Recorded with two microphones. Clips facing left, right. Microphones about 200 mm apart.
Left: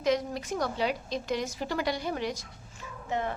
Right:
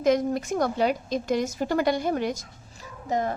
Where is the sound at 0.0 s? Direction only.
50° right (ahead or behind).